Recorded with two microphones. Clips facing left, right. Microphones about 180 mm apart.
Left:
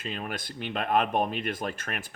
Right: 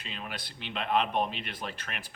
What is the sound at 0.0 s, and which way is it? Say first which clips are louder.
Speech: left 6 dB; 45° left (ahead or behind).